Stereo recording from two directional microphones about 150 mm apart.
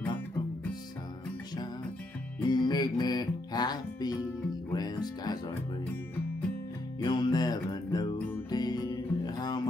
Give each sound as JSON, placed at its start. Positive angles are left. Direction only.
{"t": 2.5, "sound": "music", "side_deg": 30}
{"t": 7.0, "sound": "music", "side_deg": 30}